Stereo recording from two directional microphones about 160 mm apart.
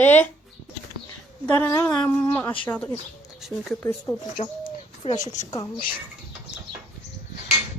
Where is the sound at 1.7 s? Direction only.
20° left (ahead or behind).